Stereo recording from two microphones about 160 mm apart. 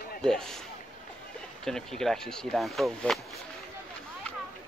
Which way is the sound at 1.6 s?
5° left (ahead or behind).